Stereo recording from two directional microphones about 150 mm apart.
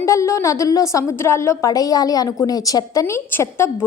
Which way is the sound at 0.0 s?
20° left (ahead or behind).